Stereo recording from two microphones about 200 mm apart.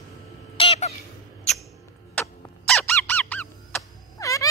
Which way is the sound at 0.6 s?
30° left (ahead or behind).